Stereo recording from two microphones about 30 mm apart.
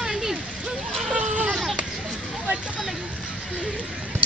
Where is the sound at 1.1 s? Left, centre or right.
Right.